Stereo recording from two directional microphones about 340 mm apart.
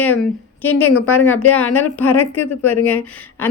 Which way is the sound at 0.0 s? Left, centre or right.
Centre.